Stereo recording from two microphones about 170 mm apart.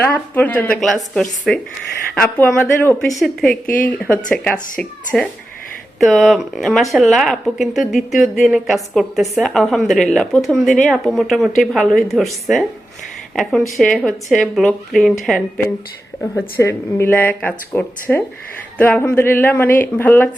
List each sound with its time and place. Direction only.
0.0 s speech: 10° left (ahead or behind)
3.2 s speech: centre (ahead or behind)
16.3 s speech: 15° left (ahead or behind)